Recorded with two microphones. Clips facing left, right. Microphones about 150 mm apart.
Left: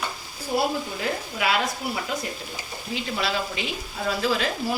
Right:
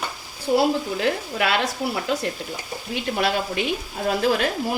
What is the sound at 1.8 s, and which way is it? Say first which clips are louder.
Speech: right 4 dB; 90° right.